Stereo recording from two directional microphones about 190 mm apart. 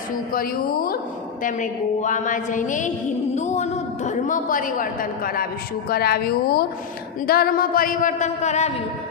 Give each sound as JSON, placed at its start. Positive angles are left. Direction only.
{"t": 0.3, "sound": "a woman's voice", "side_deg": 50}